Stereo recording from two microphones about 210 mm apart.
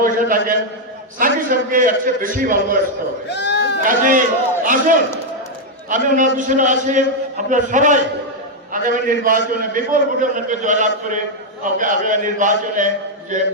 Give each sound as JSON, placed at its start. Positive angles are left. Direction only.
{"t": 0.0, "sound": "a man's voice", "side_deg": -40}
{"t": 3.2, "sound": "goat", "side_deg": 55}
{"t": 3.8, "sound": "a man's voice", "side_deg": -40}